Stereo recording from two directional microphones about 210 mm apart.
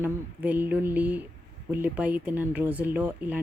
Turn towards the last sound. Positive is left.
turn(degrees=-10)  # may be behind; listen again after turning